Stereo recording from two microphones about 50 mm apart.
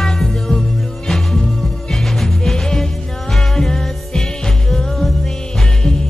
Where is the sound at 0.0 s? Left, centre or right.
Centre.